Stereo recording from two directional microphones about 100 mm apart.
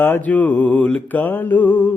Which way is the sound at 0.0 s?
20° left (ahead or behind).